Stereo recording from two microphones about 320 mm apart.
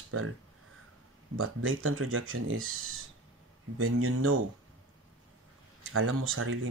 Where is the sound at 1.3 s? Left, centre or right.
Right.